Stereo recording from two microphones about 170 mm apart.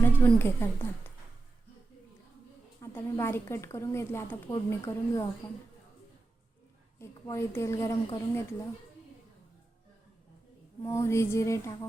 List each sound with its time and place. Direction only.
0.0 s a woman's voice: 10° left (ahead or behind)
2.8 s speech: 15° left (ahead or behind)
7.0 s speech: 15° left (ahead or behind)
10.8 s speech: 15° left (ahead or behind)